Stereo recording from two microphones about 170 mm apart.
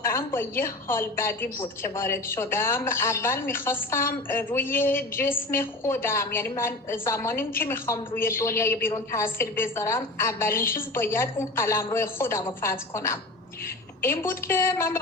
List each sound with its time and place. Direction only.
0.1 s a woman's voice: 15° left (ahead or behind)